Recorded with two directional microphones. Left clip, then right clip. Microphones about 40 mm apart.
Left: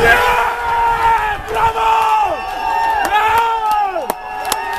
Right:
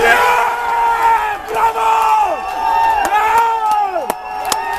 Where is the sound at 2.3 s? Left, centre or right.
Left.